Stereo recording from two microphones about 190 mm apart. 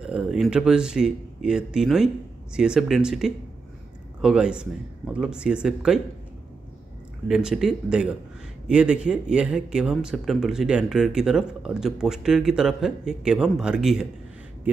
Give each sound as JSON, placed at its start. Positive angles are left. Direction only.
{"t": 0.0, "sound": "speech", "side_deg": -5}
{"t": 7.2, "sound": "speech", "side_deg": -5}